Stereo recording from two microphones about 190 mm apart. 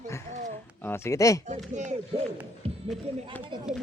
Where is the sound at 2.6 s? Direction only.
30° right (ahead or behind).